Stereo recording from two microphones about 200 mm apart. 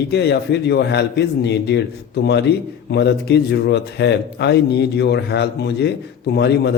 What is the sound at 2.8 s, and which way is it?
Mantra, 55° left (ahead or behind).